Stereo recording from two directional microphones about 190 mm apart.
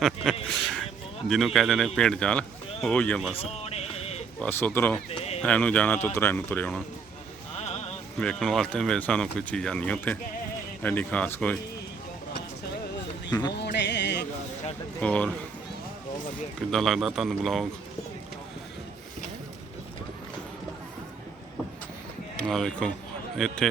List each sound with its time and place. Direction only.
0.2 s speech: 5° left (ahead or behind)
3.3 s a sound: 30° left (ahead or behind)
4.4 s speech: 10° left (ahead or behind)
7.6 s a sound: 35° left (ahead or behind)
8.2 s speech: 5° left (ahead or behind)
13.6 s music: 65° left (ahead or behind)
15.0 s speech: 5° left (ahead or behind)
16.6 s speech: centre (ahead or behind)
22.4 s speech: 5° left (ahead or behind)